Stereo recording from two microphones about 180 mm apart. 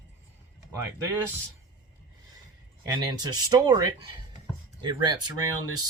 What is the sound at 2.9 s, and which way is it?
Speech, 20° right (ahead or behind).